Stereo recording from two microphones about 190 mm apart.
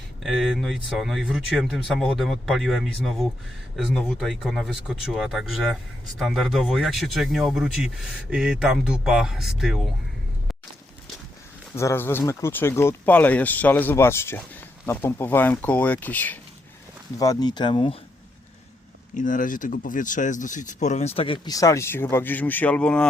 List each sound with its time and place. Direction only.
0.2 s speech: centre (ahead or behind)
11.7 s speech: 15° left (ahead or behind)
17.2 s speech: 20° left (ahead or behind)
19.1 s speech: 45° left (ahead or behind); by 23.0 s 5° left (ahead or behind)